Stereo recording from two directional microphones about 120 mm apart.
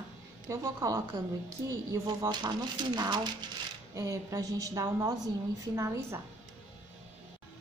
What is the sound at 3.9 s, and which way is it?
A woman's voice, 25° right (ahead or behind).